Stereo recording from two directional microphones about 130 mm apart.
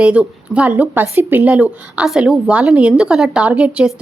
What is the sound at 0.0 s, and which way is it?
A woman's voice, 10° right (ahead or behind).